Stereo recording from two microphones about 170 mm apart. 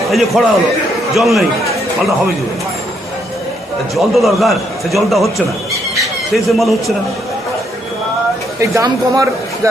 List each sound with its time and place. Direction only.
0.1 s a man's voice: centre (ahead or behind)
3.9 s a man's voice: centre (ahead or behind)
8.6 s a man's voice: 20° right (ahead or behind)